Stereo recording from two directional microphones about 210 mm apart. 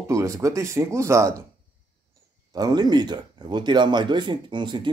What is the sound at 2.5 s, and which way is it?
Speech, 20° right (ahead or behind).